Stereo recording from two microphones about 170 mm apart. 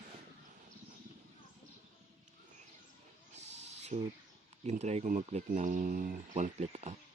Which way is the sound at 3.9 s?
40° right (ahead or behind).